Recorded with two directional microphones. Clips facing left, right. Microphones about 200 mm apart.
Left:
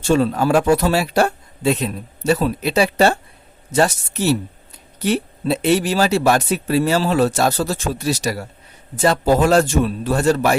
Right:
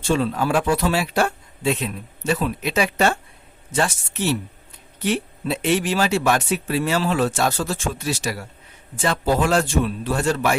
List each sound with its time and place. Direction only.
0.1 s speech: 40° left (ahead or behind)